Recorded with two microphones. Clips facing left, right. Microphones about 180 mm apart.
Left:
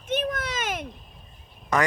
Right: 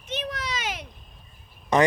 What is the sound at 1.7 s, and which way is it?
Speech, 20° right (ahead or behind).